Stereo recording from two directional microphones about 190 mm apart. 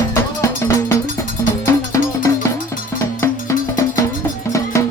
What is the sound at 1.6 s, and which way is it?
Music, 15° left (ahead or behind).